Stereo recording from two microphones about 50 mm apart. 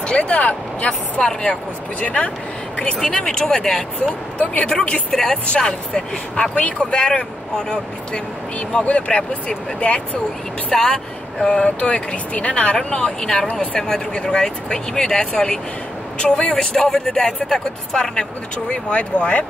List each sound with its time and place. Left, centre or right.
0.0 s speech: left
3.0 s speech: centre
4.6 s speech: left
5.1 s speech: centre; by 10.0 s left
10.7 s speech: centre
18.7 s speech: left